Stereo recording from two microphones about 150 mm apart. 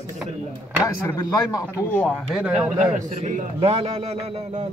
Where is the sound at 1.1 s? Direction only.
20° left (ahead or behind).